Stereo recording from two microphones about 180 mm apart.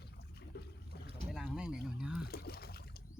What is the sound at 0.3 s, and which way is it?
Water, 65° left (ahead or behind).